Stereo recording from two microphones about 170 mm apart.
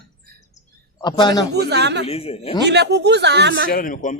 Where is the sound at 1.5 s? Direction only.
75° right (ahead or behind).